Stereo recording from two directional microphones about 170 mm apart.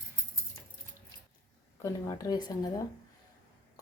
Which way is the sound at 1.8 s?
20° left (ahead or behind).